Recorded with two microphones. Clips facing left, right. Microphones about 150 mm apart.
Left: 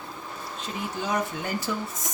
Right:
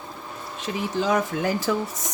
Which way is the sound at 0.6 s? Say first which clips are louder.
Right 7 dB; 90° right.